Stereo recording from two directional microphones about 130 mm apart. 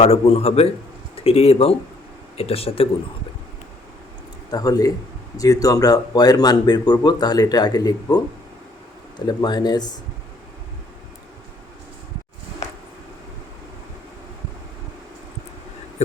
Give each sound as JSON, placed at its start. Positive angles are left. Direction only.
{"t": 0.0, "sound": "a man's voice", "side_deg": 50}
{"t": 4.5, "sound": "speech", "side_deg": 30}
{"t": 16.0, "sound": "a sound", "side_deg": 60}